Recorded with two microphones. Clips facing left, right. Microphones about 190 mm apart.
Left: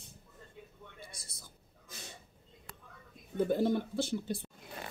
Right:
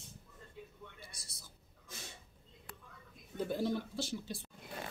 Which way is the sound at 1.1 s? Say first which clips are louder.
Left 4 dB; 50° left (ahead or behind).